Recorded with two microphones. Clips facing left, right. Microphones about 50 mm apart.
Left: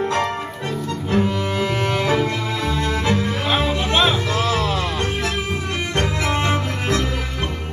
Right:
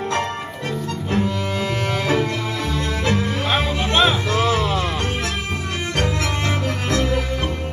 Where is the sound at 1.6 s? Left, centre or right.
Centre.